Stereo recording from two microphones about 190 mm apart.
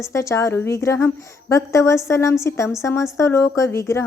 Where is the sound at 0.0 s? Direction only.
15° left (ahead or behind).